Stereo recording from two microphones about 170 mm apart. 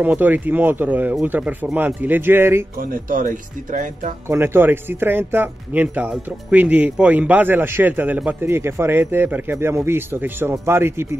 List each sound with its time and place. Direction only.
0.0 s speech: 10° right (ahead or behind)
2.8 s speech: 55° right (ahead or behind)
4.3 s speech: 15° right (ahead or behind)